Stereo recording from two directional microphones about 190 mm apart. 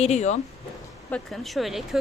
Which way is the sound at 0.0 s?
35° left (ahead or behind).